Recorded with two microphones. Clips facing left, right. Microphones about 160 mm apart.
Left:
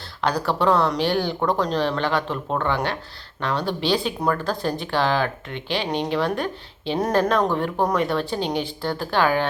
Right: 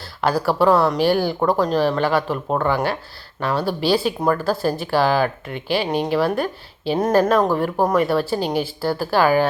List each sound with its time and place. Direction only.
0.2 s speech: 5° right (ahead or behind)